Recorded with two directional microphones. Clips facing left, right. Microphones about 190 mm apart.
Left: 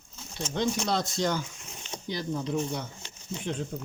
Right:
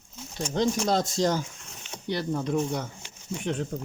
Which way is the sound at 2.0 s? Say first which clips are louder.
Right 4 dB; 65° right (ahead or behind).